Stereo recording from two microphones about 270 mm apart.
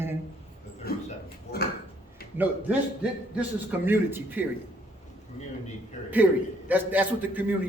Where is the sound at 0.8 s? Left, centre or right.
Left.